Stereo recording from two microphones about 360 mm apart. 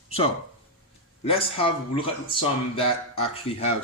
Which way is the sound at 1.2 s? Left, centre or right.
Centre.